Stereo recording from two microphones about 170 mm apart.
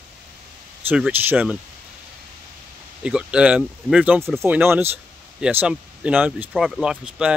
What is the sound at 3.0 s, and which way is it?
Speech, 5° right (ahead or behind).